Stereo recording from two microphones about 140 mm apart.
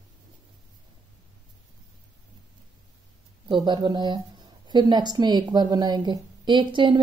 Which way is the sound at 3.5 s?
30° right (ahead or behind).